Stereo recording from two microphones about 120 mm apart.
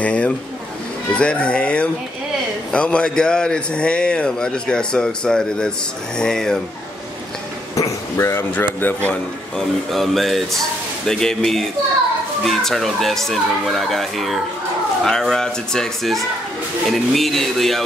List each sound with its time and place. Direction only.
0.0 s a man's voice: 10° left (ahead or behind)
7.7 s a man's voice: 25° left (ahead or behind)
9.8 s speech: centre (ahead or behind)